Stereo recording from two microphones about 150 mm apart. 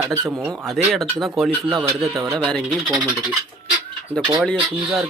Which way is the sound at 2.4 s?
Centre (ahead or behind).